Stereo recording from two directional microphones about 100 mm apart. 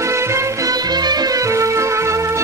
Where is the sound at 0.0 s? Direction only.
30° right (ahead or behind).